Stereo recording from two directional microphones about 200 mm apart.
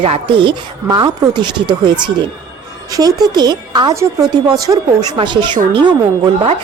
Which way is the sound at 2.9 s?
20° right (ahead or behind).